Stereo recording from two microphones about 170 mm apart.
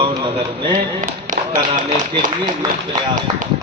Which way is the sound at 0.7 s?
50° right (ahead or behind).